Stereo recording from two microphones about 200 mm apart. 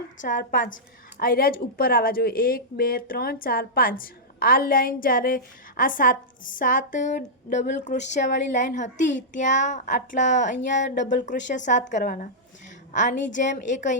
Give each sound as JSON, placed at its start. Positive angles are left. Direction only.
{"t": 0.2, "sound": "a woman's voice", "side_deg": 40}
{"t": 10.8, "sound": "speech", "side_deg": 60}
{"t": 11.1, "sound": "a woman's voice", "side_deg": 40}